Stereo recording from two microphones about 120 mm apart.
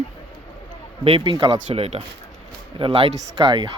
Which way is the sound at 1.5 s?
60° right (ahead or behind).